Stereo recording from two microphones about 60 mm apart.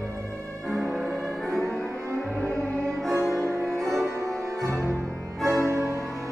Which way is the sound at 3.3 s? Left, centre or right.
Right.